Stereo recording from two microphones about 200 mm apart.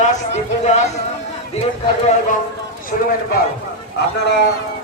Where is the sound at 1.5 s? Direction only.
30° left (ahead or behind).